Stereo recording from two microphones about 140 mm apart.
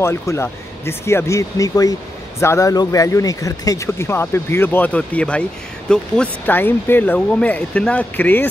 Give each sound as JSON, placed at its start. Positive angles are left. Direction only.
{"t": 0.0, "sound": "speech", "side_deg": 20}